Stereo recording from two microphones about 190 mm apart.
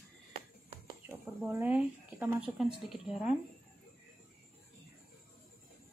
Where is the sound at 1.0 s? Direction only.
10° right (ahead or behind).